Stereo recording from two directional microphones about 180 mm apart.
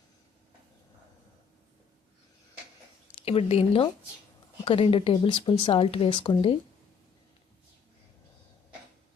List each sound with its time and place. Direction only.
3.2 s speech: 35° left (ahead or behind)